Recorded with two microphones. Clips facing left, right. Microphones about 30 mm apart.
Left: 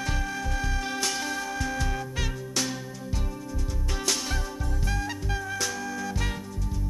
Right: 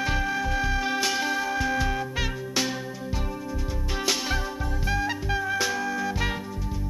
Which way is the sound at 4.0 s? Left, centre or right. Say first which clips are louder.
Right 3 dB; centre.